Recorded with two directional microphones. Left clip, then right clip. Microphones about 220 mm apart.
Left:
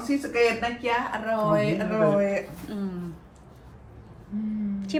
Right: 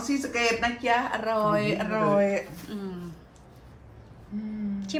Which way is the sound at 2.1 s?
15° right (ahead or behind).